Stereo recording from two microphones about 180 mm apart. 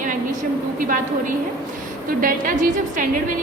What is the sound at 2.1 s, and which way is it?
A woman's voice, 50° right (ahead or behind).